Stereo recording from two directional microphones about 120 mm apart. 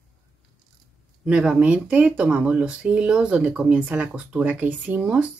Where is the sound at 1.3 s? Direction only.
5° right (ahead or behind).